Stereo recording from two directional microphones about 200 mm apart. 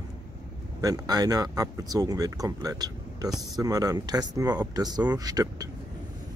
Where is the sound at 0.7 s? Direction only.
20° right (ahead or behind).